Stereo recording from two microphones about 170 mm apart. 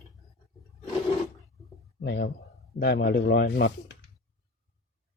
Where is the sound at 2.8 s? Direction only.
70° left (ahead or behind).